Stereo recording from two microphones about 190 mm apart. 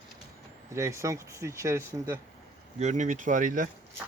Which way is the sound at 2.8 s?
40° right (ahead or behind).